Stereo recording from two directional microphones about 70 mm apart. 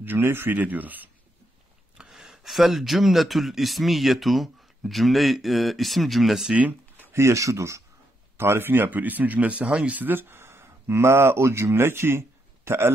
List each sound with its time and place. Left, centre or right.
0.0 s speech: right
2.0 s speech: centre
6.5 s a sound: right
7.1 s speech: right
8.4 s speech: right